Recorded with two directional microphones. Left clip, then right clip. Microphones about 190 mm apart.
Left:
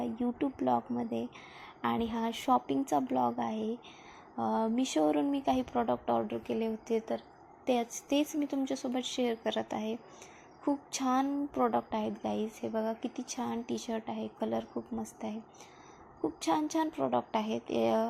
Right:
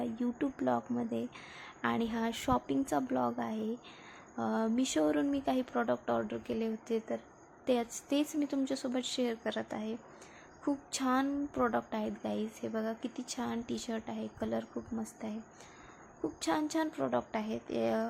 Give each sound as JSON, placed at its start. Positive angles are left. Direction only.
{"t": 0.0, "sound": "a woman's voice", "side_deg": 0}
{"t": 16.2, "sound": "a woman's voice", "side_deg": 0}